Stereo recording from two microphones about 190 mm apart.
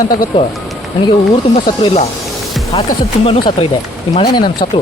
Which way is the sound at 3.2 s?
30° left (ahead or behind).